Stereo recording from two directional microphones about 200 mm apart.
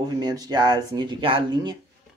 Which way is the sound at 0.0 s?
20° right (ahead or behind).